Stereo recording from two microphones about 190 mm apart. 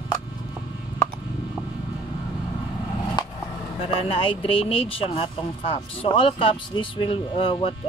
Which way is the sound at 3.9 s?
30° left (ahead or behind).